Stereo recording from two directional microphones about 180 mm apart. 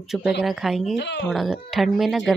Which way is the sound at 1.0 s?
75° left (ahead or behind).